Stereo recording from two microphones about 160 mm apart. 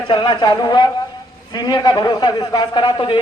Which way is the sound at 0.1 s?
30° left (ahead or behind).